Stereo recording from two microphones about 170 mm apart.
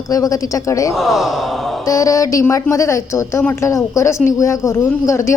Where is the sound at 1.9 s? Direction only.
20° left (ahead or behind).